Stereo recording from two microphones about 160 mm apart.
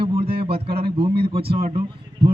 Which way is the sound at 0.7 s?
75° right (ahead or behind).